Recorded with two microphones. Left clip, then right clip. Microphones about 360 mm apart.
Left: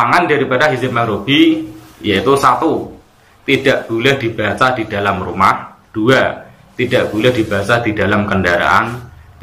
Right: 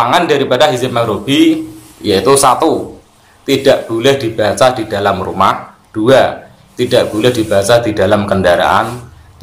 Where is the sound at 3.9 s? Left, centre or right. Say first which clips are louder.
Right 2 dB; centre.